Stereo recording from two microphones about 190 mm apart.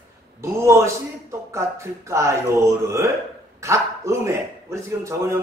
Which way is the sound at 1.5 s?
15° right (ahead or behind).